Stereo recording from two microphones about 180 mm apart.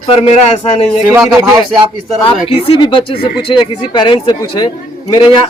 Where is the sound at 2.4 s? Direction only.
30° left (ahead or behind).